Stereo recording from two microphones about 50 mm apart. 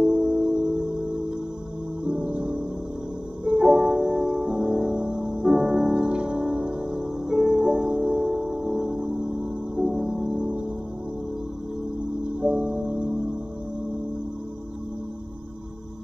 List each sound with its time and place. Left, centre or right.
0.0 s music: centre
2.0 s music: right
12.3 s music: centre